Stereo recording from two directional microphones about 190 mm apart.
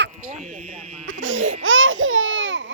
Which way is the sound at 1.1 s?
90° right.